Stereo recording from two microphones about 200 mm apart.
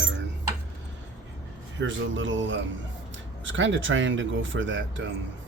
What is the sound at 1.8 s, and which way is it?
Speech, 70° right (ahead or behind).